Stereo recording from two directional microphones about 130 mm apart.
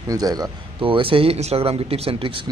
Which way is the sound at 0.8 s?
40° right (ahead or behind).